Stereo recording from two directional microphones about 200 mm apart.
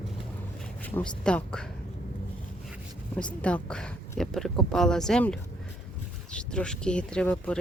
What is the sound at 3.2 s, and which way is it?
Speech, 5° left (ahead or behind).